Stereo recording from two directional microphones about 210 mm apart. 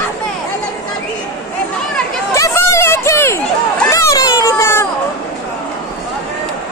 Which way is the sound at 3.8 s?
15° left (ahead or behind).